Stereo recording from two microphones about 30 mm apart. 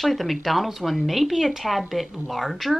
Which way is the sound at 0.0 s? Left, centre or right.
Centre.